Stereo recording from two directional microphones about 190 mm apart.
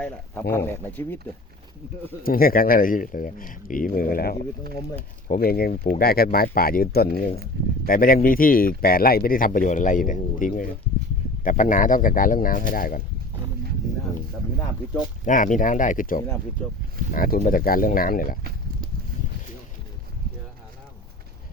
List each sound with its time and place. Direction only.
0.5 s speech: 10° left (ahead or behind)
2.2 s speech: 50° left (ahead or behind)
15.2 s speech: 45° left (ahead or behind)